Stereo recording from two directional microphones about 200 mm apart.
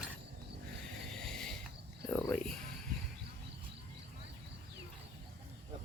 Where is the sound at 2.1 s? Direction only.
10° left (ahead or behind).